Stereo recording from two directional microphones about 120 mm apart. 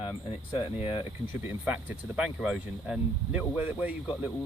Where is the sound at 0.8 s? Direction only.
50° left (ahead or behind).